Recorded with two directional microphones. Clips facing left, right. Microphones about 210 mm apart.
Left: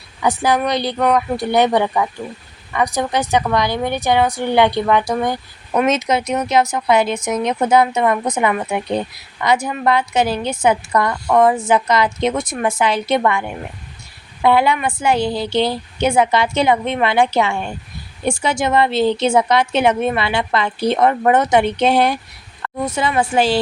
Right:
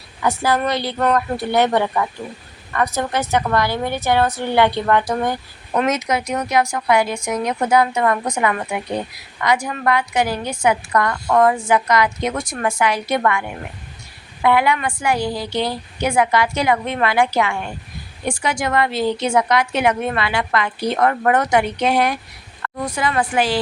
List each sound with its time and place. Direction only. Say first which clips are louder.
0.2 s speech: left 2 dB; 15° left (ahead or behind)
5.9 s a woman's voice: left 3 dB; 25° left (ahead or behind)
14.4 s a woman's voice: left 2 dB; 30° left (ahead or behind)